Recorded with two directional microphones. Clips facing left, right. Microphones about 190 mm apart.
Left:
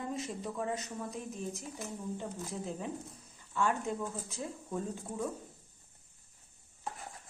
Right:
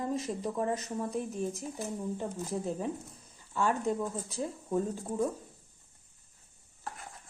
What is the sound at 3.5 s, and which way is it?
Speech, 35° right (ahead or behind).